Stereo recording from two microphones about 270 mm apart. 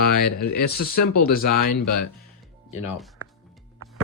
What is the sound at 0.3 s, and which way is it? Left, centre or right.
Speech, left.